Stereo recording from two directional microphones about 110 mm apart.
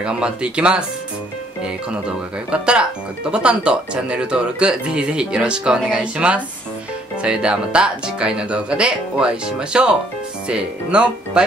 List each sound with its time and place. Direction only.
0.0 s speech: 10° right (ahead or behind)